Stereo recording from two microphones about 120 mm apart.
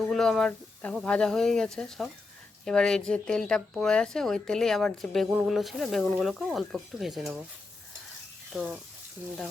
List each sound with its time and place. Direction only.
0.1 s speech: 5° left (ahead or behind)
8.5 s speech: 10° right (ahead or behind)